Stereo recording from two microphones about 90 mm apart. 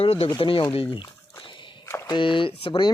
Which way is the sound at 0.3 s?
75° left (ahead or behind).